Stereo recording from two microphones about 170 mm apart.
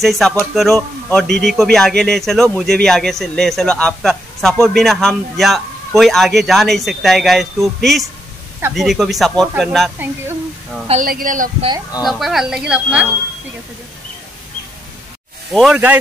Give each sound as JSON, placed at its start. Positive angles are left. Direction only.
{"t": 0.0, "sound": "speech", "side_deg": 0}
{"t": 11.1, "sound": "speech", "side_deg": -55}
{"t": 12.0, "sound": "speech", "side_deg": 0}
{"t": 15.5, "sound": "speech", "side_deg": -5}